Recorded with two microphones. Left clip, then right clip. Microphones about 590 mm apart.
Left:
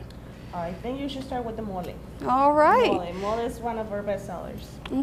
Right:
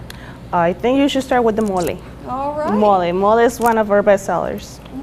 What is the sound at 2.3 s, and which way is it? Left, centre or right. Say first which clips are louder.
Speech: left 2 dB; left.